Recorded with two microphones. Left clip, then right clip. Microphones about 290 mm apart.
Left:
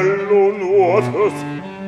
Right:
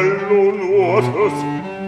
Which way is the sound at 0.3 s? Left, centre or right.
Centre.